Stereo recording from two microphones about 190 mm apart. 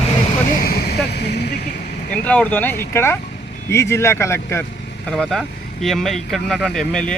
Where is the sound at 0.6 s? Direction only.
55° left (ahead or behind).